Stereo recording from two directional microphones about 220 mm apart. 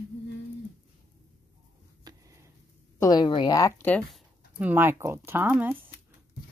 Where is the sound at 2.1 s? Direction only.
20° right (ahead or behind).